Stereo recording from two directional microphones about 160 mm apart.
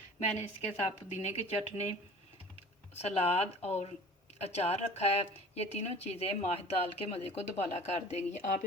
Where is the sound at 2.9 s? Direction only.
40° left (ahead or behind).